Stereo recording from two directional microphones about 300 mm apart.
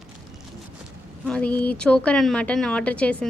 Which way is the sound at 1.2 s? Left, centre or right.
Centre.